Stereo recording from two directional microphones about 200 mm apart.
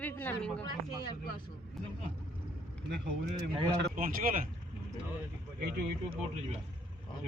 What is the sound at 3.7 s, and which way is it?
Speech, 40° right (ahead or behind).